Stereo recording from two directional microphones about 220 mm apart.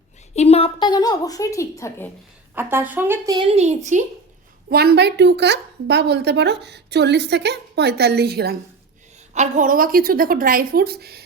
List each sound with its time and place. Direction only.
0.3 s a woman's voice: 30° left (ahead or behind)
2.6 s speech: 10° right (ahead or behind); by 4.0 s 30° right (ahead or behind)
4.7 s a woman's voice: 45° right (ahead or behind)
9.3 s a woman's voice: 35° right (ahead or behind)